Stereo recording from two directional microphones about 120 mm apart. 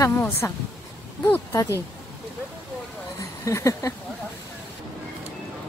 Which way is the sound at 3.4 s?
25° left (ahead or behind).